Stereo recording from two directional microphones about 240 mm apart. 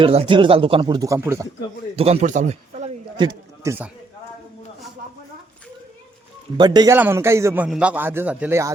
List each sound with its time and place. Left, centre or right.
0.0 s speech: right
2.0 s speech: right; by 3.9 s centre
6.6 s a man's voice: centre